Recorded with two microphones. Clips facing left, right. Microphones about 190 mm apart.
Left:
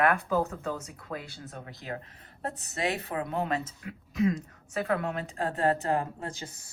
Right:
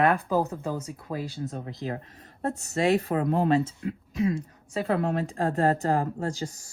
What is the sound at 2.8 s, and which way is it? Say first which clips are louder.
Speech: right 8 dB; 35° right (ahead or behind).